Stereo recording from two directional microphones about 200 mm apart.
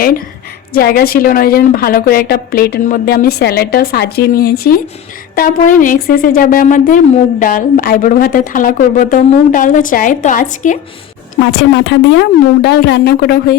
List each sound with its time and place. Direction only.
0.7 s a woman's voice: 50° left (ahead or behind)
11.7 s speech: 60° left (ahead or behind)